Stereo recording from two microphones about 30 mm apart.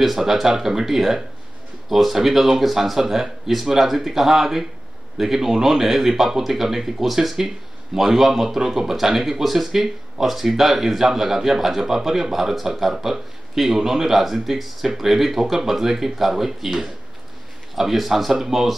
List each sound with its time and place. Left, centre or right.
0.0 s speech: centre